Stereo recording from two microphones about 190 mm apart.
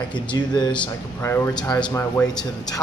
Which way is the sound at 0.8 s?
10° left (ahead or behind).